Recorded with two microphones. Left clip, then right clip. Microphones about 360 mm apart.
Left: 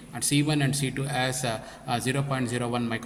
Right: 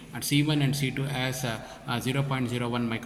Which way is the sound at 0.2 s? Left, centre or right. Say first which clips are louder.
Left 1 dB; left.